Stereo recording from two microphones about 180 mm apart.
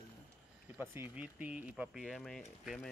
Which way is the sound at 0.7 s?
10° right (ahead or behind).